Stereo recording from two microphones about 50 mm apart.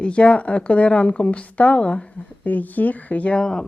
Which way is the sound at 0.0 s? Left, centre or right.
Left.